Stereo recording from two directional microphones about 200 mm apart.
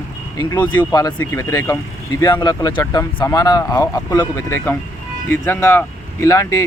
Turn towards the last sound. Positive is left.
turn(degrees=15)  # may be behind; listen again after turning